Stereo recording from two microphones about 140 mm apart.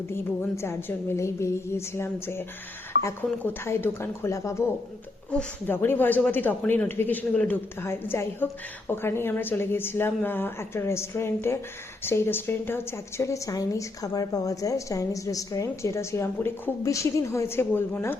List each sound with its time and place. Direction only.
0.1 s a woman's voice: 20° left (ahead or behind)